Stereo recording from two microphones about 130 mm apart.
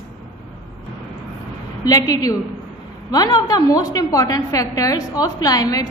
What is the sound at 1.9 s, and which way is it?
A woman's voice, 30° left (ahead or behind).